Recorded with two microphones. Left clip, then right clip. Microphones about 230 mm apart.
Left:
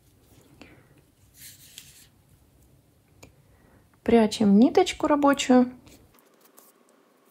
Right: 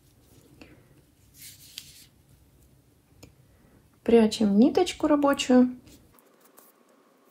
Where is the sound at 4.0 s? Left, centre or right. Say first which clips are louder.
Even; left.